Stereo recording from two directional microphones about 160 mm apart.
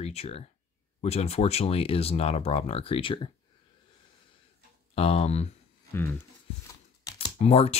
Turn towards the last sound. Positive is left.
turn(degrees=40)  # may be behind; listen again after turning